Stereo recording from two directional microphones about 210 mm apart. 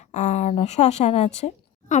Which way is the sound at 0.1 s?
35° left (ahead or behind).